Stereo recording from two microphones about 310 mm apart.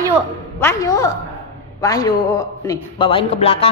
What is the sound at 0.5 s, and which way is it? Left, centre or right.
A man's voice, centre.